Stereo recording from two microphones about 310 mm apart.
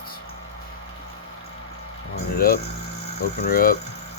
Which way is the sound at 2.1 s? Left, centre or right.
Left.